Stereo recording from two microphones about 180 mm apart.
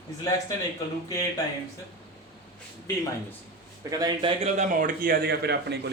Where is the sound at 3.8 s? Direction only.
20° right (ahead or behind).